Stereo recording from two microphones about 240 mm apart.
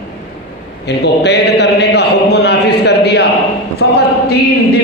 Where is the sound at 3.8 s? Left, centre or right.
Left.